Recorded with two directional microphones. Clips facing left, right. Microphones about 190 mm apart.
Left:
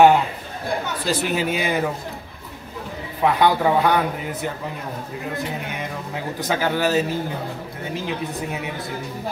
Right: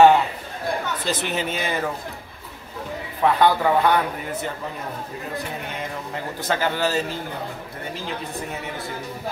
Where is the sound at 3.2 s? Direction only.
15° left (ahead or behind).